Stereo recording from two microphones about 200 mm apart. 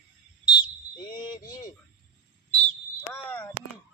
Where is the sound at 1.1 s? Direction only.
20° left (ahead or behind).